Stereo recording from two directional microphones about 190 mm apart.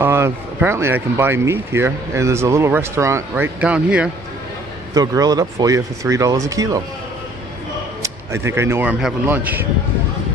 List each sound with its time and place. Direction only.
0.0 s speech: 15° right (ahead or behind)
4.9 s speech: 20° right (ahead or behind)
8.0 s speech: 15° right (ahead or behind)